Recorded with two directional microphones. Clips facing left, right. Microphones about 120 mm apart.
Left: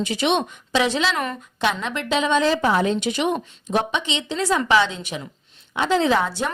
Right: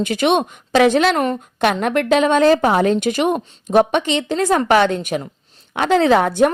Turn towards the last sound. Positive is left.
turn(degrees=-55)  # may be behind; listen again after turning